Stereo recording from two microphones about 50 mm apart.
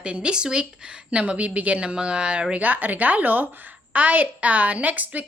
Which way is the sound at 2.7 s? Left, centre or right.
Right.